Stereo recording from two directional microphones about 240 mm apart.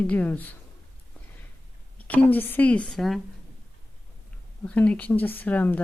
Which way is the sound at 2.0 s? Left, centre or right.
Centre.